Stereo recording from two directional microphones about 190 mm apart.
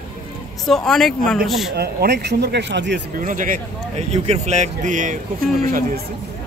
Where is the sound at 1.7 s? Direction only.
55° right (ahead or behind).